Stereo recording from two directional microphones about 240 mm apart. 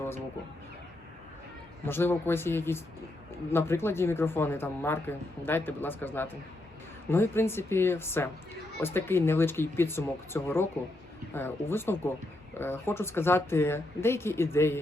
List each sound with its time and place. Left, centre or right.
1.8 s speech: centre